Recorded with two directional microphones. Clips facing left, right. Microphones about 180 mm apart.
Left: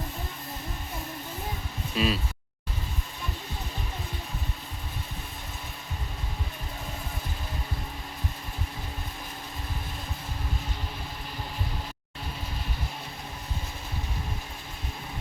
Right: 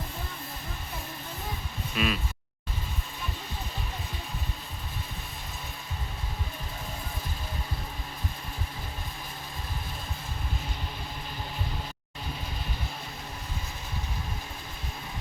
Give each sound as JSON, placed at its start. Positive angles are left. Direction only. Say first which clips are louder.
{"t": 2.0, "sound": "speech", "louder": "left 2 dB", "side_deg": 30}